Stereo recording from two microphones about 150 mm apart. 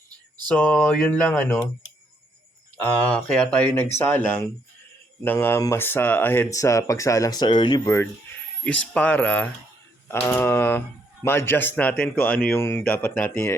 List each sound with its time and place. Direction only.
0.4 s speech: 10° left (ahead or behind)
3.0 s speech: 5° left (ahead or behind); by 7.8 s 35° left (ahead or behind)
8.6 s speech: 10° left (ahead or behind)